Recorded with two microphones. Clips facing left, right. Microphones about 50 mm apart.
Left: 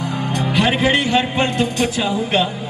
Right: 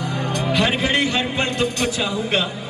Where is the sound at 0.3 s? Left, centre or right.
Left.